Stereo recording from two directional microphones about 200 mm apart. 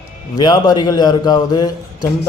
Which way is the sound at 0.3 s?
20° left (ahead or behind).